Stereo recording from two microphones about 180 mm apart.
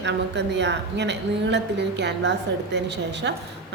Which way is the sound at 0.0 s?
75° right (ahead or behind).